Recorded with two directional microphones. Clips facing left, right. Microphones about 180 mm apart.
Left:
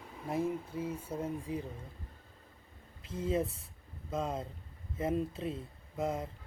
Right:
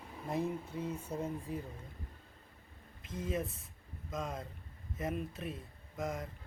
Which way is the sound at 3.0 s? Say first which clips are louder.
Left 5 dB; 30° left (ahead or behind).